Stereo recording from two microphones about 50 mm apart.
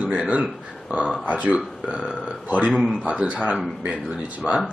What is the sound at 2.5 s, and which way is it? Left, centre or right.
Speech, right.